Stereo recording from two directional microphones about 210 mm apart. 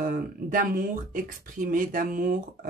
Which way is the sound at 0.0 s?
40° right (ahead or behind).